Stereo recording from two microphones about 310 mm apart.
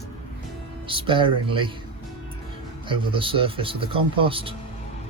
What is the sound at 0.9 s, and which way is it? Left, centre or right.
Speech, centre.